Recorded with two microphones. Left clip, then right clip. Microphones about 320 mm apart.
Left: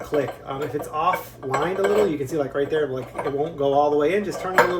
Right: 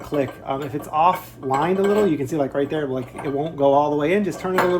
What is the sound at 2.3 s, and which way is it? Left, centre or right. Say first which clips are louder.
Speech: right 1 dB; centre.